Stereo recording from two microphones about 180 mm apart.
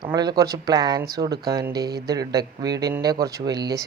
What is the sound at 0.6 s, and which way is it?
Speech, 20° right (ahead or behind).